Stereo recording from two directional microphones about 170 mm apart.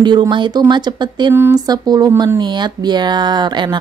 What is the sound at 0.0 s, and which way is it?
Speech, 25° right (ahead or behind).